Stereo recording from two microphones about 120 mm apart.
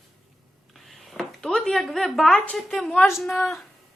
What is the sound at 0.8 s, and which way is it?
A woman's voice, centre (ahead or behind).